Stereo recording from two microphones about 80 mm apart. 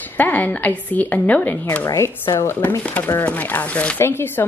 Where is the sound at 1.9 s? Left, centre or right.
Left.